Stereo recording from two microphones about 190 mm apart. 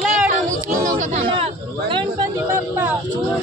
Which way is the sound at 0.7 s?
40° right (ahead or behind).